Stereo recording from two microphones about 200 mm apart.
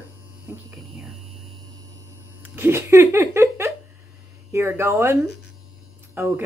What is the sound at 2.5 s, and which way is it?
Speech, 10° right (ahead or behind).